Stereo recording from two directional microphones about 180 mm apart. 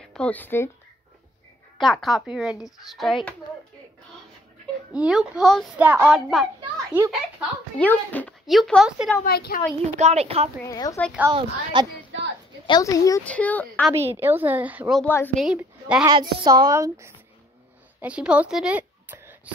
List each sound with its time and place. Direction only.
0.1 s speech: 10° left (ahead or behind)
1.8 s a woman's voice: centre (ahead or behind)
4.9 s a woman's voice: 5° right (ahead or behind)
7.8 s a woman's voice: 10° left (ahead or behind)
9.2 s speech: 55° left (ahead or behind)
9.9 s a woman's voice: 35° right (ahead or behind)
10.6 s speech: 20° left (ahead or behind)
11.3 s a woman's voice: 25° right (ahead or behind)
12.6 s speech: 20° left (ahead or behind)
13.2 s speech: 5° left (ahead or behind)
14.2 s speech: 10° right (ahead or behind)
15.0 s speech: 10° left (ahead or behind)
15.3 s a woman's voice: 5° right (ahead or behind)
16.1 s a woman's voice: 25° right (ahead or behind)